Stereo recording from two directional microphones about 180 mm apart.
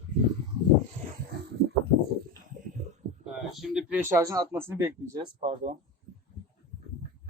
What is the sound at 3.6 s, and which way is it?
Speech, 5° right (ahead or behind).